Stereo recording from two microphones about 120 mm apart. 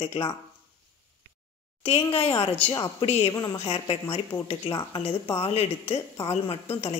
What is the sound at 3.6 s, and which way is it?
A woman's voice, 55° left (ahead or behind).